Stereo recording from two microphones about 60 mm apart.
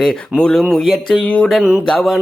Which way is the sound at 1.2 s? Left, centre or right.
Centre.